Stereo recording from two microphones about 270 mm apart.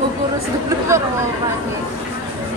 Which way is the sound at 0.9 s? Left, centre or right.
Centre.